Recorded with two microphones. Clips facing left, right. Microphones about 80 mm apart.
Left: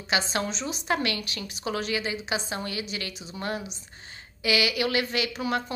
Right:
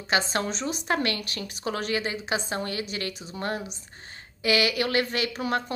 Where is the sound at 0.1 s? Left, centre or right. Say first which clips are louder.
Right 2 dB; right.